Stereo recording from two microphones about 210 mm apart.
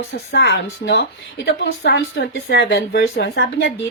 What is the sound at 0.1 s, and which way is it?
A woman's voice, 55° left (ahead or behind).